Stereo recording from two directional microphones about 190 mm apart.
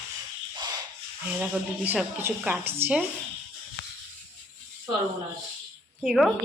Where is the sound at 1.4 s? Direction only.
5° right (ahead or behind).